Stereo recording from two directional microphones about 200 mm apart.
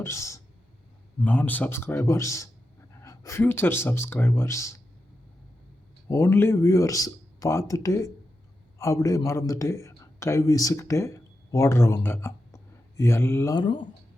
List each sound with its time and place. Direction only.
0.0 s speech: 15° left (ahead or behind)
6.1 s a man's voice: 15° left (ahead or behind)